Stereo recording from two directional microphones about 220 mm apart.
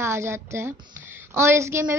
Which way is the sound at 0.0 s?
10° right (ahead or behind).